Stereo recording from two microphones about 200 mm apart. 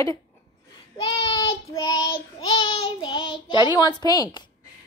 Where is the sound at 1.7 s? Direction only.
15° left (ahead or behind).